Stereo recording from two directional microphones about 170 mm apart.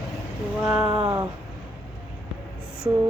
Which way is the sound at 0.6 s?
5° right (ahead or behind).